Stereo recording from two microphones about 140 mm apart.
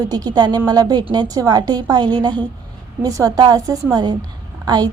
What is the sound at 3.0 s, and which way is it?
A woman's voice, 25° right (ahead or behind).